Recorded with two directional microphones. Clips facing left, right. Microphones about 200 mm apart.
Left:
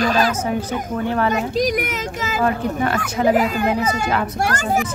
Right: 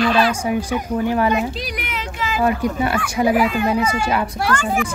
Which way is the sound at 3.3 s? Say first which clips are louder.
Even; 40° left (ahead or behind).